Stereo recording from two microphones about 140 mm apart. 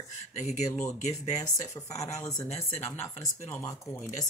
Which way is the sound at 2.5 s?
50° left (ahead or behind).